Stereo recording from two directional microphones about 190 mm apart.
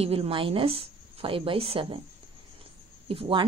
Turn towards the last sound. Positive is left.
turn(degrees=-30)  # may be behind; listen again after turning